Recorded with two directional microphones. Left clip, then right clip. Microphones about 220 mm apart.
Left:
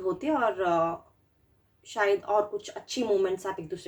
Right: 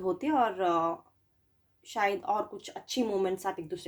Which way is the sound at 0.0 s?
40° right (ahead or behind).